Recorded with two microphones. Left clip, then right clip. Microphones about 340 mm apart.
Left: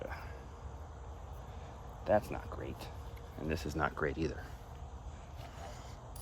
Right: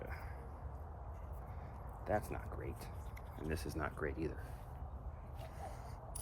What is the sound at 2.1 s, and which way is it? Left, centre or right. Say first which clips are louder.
Speech: left 8 dB; left.